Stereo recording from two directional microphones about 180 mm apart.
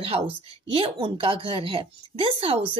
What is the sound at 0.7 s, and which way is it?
A woman's voice, 30° right (ahead or behind).